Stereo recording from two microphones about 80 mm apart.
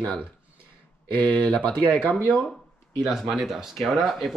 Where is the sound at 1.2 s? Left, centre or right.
Centre.